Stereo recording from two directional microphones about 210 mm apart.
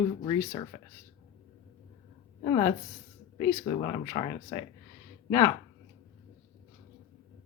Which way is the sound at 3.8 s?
20° left (ahead or behind).